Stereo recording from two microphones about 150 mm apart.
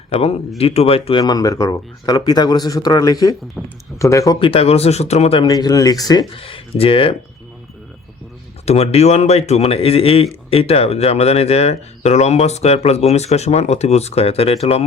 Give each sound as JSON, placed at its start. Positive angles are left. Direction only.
{"t": 0.6, "sound": "speech", "side_deg": 45}
{"t": 1.2, "sound": "speech", "side_deg": 25}
{"t": 3.6, "sound": "speech", "side_deg": 0}
{"t": 3.9, "sound": "speech", "side_deg": 20}
{"t": 4.4, "sound": "speech", "side_deg": 35}
{"t": 5.5, "sound": "speech", "side_deg": 25}
{"t": 6.3, "sound": "speech", "side_deg": 40}
{"t": 8.6, "sound": "speech", "side_deg": 45}